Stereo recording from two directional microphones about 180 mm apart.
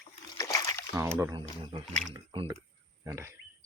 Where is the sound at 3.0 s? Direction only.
15° right (ahead or behind).